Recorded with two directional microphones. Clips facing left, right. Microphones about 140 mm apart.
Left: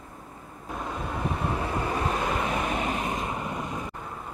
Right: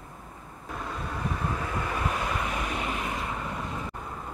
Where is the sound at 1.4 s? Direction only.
25° left (ahead or behind).